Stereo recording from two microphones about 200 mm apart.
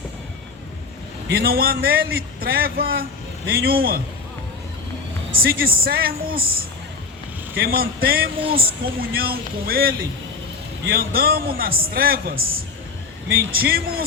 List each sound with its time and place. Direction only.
1.3 s a man's voice: 50° right (ahead or behind)
5.4 s a man's voice: 50° right (ahead or behind)
7.6 s a man's voice: 50° right (ahead or behind)
10.9 s a man's voice: 50° right (ahead or behind)
13.2 s a man's voice: 50° right (ahead or behind)